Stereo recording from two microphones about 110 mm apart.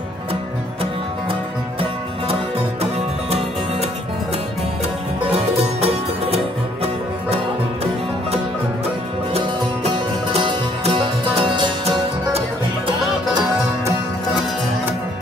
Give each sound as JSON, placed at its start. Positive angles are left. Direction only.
{"t": 5.3, "sound": "music", "side_deg": -70}
{"t": 9.4, "sound": "music", "side_deg": -60}